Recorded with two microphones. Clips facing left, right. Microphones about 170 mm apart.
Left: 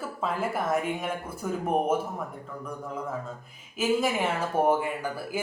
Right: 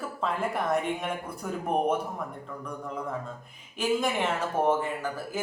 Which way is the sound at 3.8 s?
5° left (ahead or behind).